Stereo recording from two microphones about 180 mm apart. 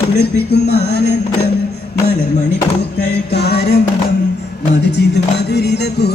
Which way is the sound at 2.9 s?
65° left (ahead or behind).